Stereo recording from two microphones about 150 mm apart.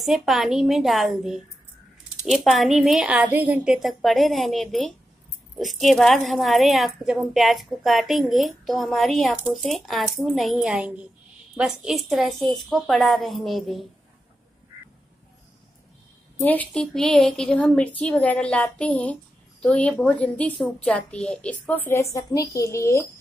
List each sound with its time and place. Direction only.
0.0 s a woman's voice: centre (ahead or behind)
16.4 s a woman's voice: 10° left (ahead or behind)